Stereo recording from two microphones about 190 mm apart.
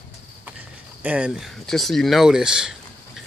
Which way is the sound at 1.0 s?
5° right (ahead or behind).